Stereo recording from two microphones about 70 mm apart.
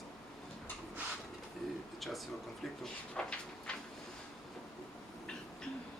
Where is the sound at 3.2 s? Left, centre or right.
Centre.